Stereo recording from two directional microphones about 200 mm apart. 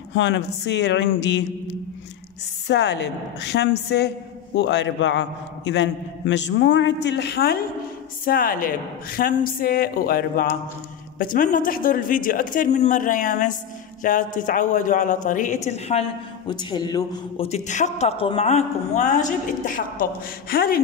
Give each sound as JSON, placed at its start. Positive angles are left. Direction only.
{"t": 0.1, "sound": "a man's voice", "side_deg": 65}
{"t": 2.7, "sound": "a man's voice", "side_deg": 60}
{"t": 17.5, "sound": "speech", "side_deg": 35}